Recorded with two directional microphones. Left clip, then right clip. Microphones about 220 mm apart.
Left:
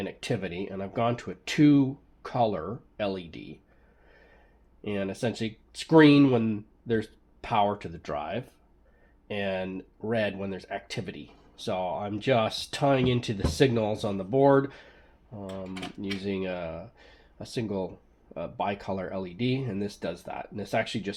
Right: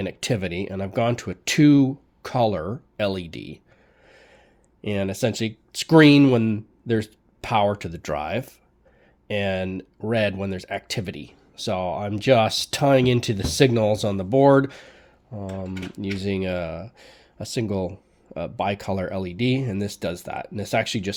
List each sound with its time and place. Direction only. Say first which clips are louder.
0.0 s speech: right 6 dB; 50° right (ahead or behind)
4.8 s speech: right 6 dB; 50° right (ahead or behind)